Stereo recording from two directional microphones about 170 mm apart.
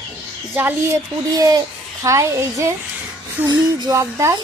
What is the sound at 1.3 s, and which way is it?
A child's voice, 20° right (ahead or behind).